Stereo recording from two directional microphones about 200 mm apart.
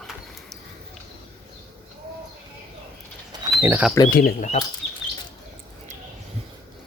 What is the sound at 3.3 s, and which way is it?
Pigeon, 10° right (ahead or behind).